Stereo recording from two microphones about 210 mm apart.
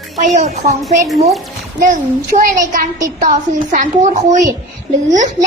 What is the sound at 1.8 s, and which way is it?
A child's voice, 40° right (ahead or behind).